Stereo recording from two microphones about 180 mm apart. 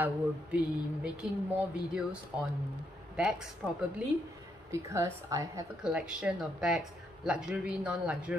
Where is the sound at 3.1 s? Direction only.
5° right (ahead or behind).